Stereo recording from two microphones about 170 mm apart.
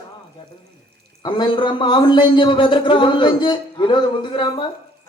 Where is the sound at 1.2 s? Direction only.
25° left (ahead or behind).